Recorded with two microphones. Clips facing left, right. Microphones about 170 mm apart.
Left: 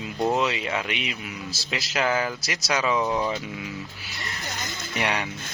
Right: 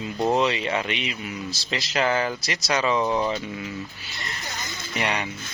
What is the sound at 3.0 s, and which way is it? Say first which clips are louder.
Speech: right 2 dB; 10° right (ahead or behind).